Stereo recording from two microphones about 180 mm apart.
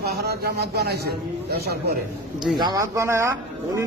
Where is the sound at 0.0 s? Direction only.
65° right (ahead or behind).